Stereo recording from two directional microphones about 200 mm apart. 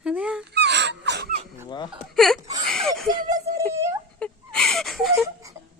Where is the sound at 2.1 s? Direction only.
Centre (ahead or behind).